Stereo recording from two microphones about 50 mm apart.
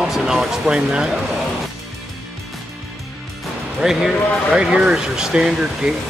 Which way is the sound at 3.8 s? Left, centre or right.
Centre.